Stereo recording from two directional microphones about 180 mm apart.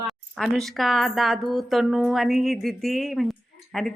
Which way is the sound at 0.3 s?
Centre (ahead or behind).